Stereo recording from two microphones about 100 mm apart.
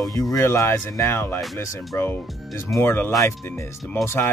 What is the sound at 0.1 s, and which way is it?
Speech, 35° left (ahead or behind).